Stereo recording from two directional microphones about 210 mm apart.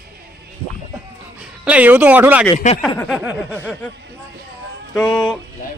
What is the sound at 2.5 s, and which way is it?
Speech, 35° left (ahead or behind).